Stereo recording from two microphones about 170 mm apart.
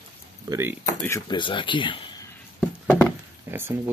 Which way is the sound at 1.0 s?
20° left (ahead or behind).